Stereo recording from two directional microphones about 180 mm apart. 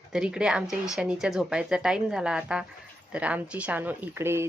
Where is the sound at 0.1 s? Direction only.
5° right (ahead or behind).